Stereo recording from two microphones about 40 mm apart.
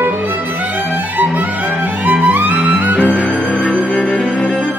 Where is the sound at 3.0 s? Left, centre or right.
Left; by 4.6 s centre.